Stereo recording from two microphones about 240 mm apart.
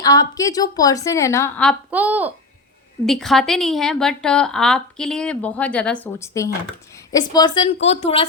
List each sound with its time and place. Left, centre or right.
0.0 s a woman's voice: centre
1.9 s a woman's voice: centre; by 8.3 s left